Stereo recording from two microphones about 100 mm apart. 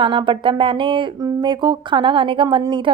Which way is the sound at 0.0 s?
55° right (ahead or behind).